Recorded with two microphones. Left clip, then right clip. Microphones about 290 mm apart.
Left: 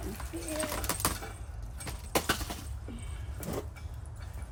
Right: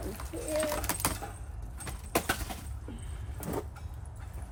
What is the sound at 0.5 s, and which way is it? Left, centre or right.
Bird, centre.